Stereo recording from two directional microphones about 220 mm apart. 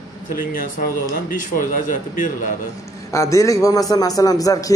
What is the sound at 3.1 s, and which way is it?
A man's voice, 15° left (ahead or behind).